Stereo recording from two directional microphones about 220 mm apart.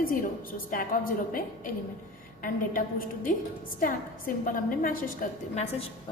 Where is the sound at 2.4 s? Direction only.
40° left (ahead or behind).